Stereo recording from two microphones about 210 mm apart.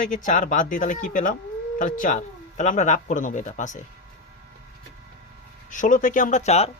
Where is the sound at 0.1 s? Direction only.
40° left (ahead or behind).